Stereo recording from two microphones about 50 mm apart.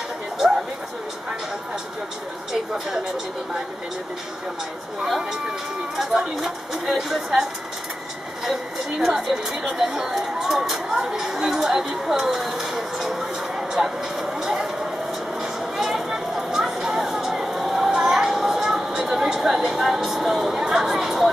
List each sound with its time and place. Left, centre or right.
5.0 s a woman's voice: centre
8.5 s a woman's voice: centre
10.9 s speech: right
11.1 s a woman's voice: centre
13.6 s a sound: centre